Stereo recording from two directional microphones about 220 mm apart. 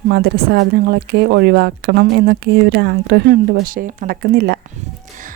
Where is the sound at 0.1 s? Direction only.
50° right (ahead or behind).